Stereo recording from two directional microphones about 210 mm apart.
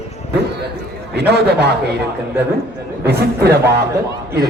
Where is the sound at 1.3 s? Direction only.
50° right (ahead or behind).